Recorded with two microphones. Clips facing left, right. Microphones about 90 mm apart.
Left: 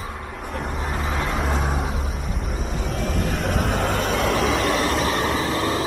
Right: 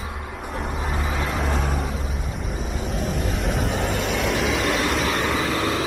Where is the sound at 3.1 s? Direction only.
50° left (ahead or behind).